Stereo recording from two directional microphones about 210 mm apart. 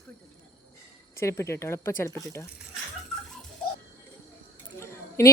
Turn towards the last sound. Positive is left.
turn(degrees=10)  # may be behind; listen again after turning